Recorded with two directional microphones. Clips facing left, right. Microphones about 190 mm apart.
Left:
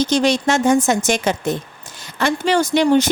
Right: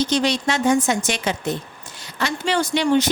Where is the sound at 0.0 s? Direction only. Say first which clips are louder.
Left 4 dB; 45° left (ahead or behind).